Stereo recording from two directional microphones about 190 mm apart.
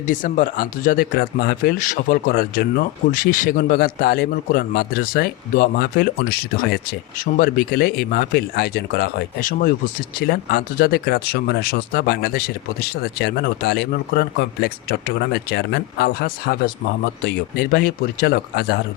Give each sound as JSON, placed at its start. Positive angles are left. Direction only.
{"t": 0.1, "sound": "speech", "side_deg": 45}